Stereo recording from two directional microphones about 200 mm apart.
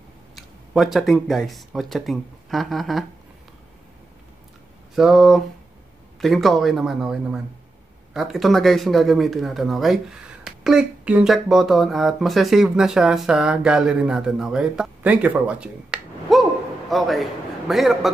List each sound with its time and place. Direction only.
0.4 s speech: centre (ahead or behind)
4.9 s speech: centre (ahead or behind)